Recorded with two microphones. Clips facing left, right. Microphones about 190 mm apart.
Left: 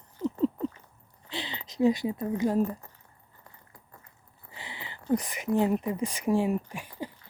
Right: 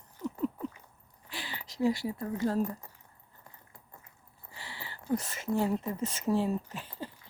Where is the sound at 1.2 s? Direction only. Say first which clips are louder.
Left 5 dB; 20° left (ahead or behind).